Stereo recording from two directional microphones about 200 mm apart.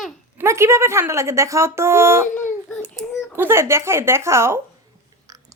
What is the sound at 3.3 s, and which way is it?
A woman's voice, 10° right (ahead or behind).